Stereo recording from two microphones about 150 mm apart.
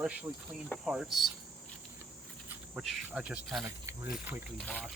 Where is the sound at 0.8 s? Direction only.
5° right (ahead or behind).